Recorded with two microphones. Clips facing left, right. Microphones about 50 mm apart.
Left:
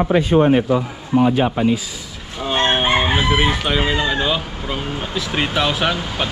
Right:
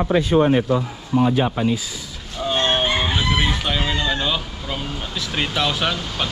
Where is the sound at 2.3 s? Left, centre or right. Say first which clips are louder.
Left 2 dB; left.